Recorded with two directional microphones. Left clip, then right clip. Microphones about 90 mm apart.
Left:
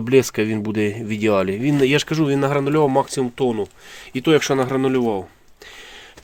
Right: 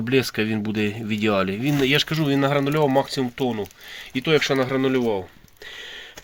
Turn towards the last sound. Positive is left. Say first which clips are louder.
# left 2 dB
turn(degrees=45)  # may be behind; listen again after turning